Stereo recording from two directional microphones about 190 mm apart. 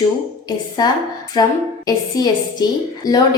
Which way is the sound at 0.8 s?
20° left (ahead or behind).